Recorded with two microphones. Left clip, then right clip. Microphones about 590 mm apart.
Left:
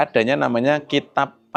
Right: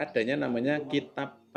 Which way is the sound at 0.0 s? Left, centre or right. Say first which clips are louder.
Left 11 dB; left.